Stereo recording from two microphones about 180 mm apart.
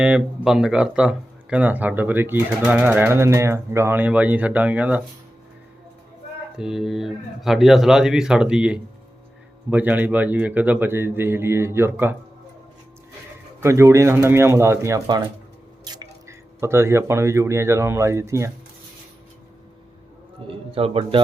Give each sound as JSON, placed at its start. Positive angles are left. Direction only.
{"t": 0.0, "sound": "speech", "side_deg": -5}
{"t": 6.6, "sound": "speech", "side_deg": -5}
{"t": 13.6, "sound": "speech", "side_deg": -15}
{"t": 15.8, "sound": "drip", "side_deg": -20}
{"t": 16.6, "sound": "speech", "side_deg": -15}
{"t": 20.5, "sound": "a man's voice", "side_deg": -30}